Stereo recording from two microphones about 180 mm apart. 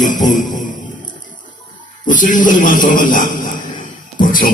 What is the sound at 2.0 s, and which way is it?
A man's voice, 45° left (ahead or behind).